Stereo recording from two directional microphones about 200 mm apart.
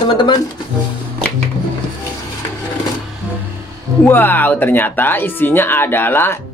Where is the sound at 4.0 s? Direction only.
10° left (ahead or behind).